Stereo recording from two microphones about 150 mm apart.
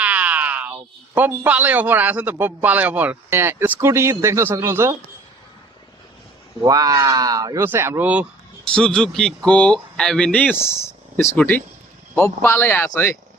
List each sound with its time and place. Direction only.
0.0 s speech: 10° right (ahead or behind)
6.6 s speech: 25° right (ahead or behind)
8.7 s speech: 5° left (ahead or behind)